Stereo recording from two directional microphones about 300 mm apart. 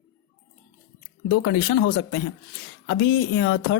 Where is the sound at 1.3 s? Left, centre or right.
Left.